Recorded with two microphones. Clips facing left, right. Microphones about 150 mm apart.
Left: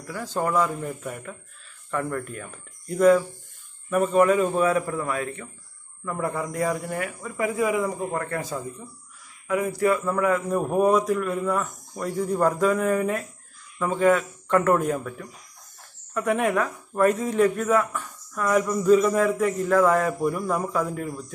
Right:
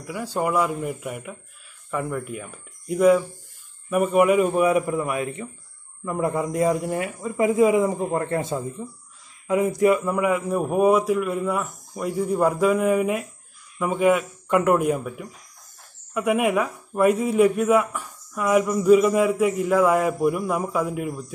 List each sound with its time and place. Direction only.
0.0 s a man's voice: 10° right (ahead or behind)